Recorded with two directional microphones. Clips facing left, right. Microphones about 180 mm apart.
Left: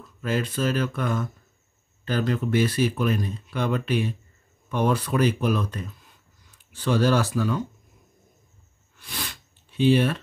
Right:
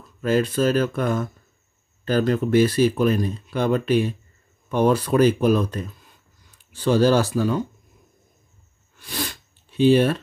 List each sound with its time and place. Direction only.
0.2 s speech: 40° right (ahead or behind)
9.0 s sniff: 40° right (ahead or behind)